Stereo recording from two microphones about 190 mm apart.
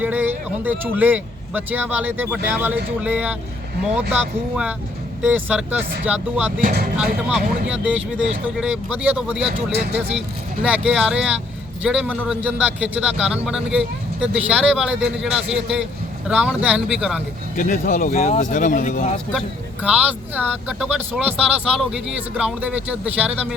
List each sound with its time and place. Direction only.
0.0 s speech: 10° right (ahead or behind)
6.6 s speech: 45° right (ahead or behind)
7.3 s a man's voice: 5° right (ahead or behind)
9.7 s speech: 60° right (ahead or behind)
10.1 s a man's voice: 5° right (ahead or behind)
17.6 s speech: 45° left (ahead or behind)
19.8 s speech: 5° right (ahead or behind)